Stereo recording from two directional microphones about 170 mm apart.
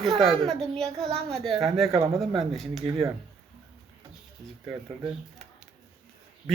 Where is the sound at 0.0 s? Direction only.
Centre (ahead or behind).